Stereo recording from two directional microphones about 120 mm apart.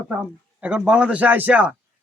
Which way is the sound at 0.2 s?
10° right (ahead or behind).